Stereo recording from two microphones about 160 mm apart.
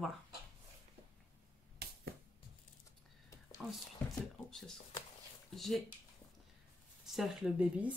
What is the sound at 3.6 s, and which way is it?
Speech, 5° right (ahead or behind).